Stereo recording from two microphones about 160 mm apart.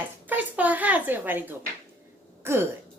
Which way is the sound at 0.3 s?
10° right (ahead or behind).